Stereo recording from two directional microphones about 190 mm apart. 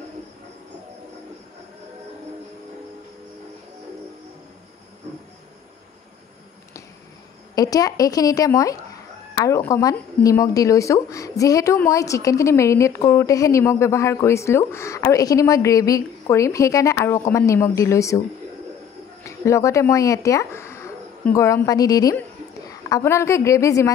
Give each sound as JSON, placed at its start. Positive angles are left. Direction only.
{"t": 7.5, "sound": "speech", "side_deg": 20}
{"t": 19.2, "sound": "a woman's voice", "side_deg": 15}